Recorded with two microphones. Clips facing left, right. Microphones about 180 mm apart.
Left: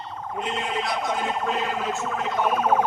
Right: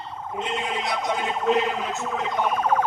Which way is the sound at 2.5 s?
10° left (ahead or behind).